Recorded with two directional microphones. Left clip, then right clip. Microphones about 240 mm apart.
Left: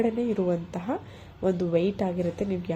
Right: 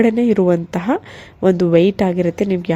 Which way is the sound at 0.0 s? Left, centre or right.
Right.